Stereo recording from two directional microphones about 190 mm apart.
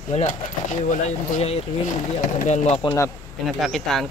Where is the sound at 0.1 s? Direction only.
40° left (ahead or behind).